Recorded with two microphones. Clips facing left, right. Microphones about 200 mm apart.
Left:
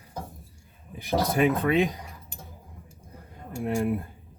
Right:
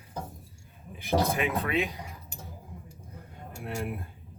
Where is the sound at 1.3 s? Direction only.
40° left (ahead or behind).